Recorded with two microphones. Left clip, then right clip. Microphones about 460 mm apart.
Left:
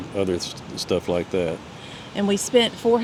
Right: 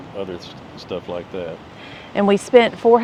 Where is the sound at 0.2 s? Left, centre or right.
Left.